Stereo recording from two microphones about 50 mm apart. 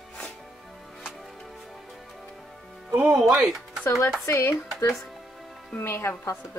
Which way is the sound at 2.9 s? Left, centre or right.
Right.